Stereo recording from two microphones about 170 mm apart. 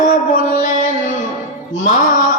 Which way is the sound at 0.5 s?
45° left (ahead or behind).